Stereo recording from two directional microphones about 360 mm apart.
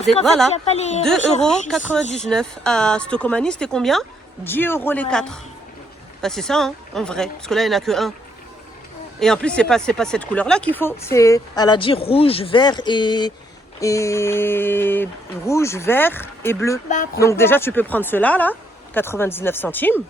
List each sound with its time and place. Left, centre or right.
0.5 s speech: centre
1.4 s speech: centre
9.2 s speech: centre